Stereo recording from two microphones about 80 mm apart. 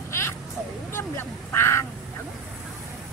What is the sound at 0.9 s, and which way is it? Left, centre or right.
Speech, left.